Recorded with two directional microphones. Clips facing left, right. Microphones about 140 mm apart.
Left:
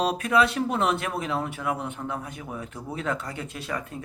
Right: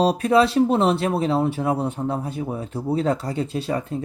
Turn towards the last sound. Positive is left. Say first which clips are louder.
# right 8 dB
turn(degrees=-30)  # may be behind; listen again after turning